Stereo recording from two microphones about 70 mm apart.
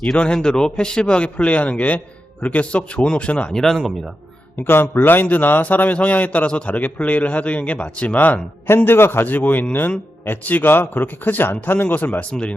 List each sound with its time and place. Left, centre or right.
0.0 s a man's voice: centre
3.5 s speech: centre
4.5 s a man's voice: left
8.6 s a man's voice: left
12.3 s a man's voice: centre